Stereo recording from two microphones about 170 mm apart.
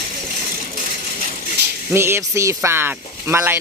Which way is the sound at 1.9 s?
15° right (ahead or behind).